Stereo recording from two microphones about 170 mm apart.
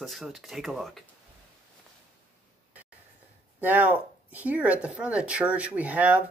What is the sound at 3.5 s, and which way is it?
Speech, 10° right (ahead or behind).